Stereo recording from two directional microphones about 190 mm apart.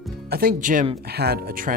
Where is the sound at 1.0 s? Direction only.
55° right (ahead or behind).